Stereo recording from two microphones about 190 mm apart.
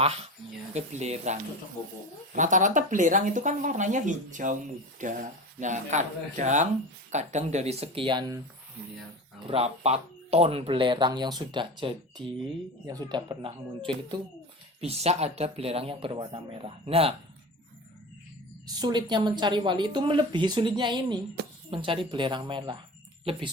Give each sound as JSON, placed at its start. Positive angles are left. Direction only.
{"t": 0.7, "sound": "speech", "side_deg": -35}
{"t": 9.5, "sound": "speech", "side_deg": -30}
{"t": 18.6, "sound": "speech", "side_deg": -20}